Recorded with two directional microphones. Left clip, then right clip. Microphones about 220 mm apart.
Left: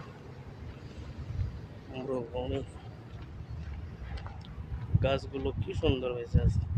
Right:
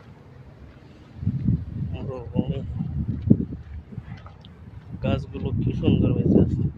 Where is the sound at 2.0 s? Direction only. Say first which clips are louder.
Right 3 dB; centre (ahead or behind).